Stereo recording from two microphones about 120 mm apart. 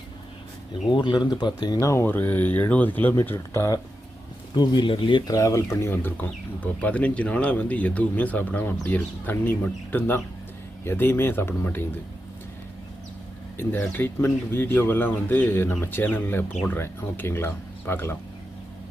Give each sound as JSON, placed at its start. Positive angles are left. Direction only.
{"t": 0.9, "sound": "speech", "side_deg": 40}
{"t": 4.5, "sound": "speech", "side_deg": 35}
{"t": 5.2, "sound": "speech", "side_deg": 30}
{"t": 13.6, "sound": "speech", "side_deg": 15}